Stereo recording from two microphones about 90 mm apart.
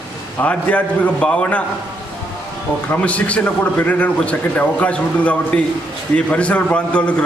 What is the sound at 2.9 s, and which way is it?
A man's voice, 15° left (ahead or behind).